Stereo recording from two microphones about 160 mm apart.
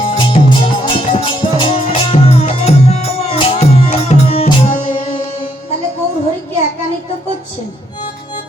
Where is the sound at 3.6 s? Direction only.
45° left (ahead or behind).